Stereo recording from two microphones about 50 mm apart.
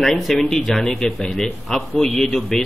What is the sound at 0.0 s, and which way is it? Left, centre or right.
A man's voice, centre.